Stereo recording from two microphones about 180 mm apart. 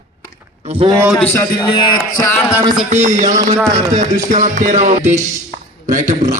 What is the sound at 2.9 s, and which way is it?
Speech, 45° right (ahead or behind).